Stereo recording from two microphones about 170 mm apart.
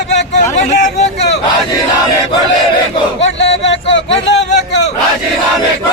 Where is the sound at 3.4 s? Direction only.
90° left.